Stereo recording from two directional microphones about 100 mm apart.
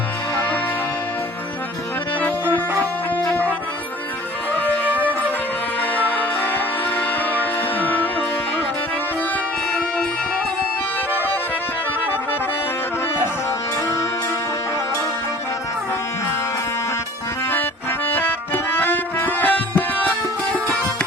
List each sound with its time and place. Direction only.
0.3 s music: 20° left (ahead or behind)
4.5 s music: 20° left (ahead or behind)
17.5 s music: 20° left (ahead or behind)